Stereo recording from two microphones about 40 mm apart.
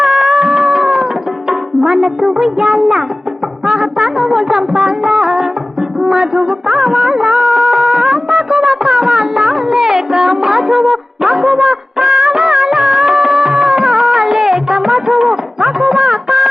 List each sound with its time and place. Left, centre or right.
0.0 s music: centre
6.0 s music of bollywood: centre